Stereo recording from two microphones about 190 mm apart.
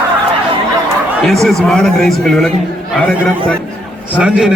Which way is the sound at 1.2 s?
Centre (ahead or behind).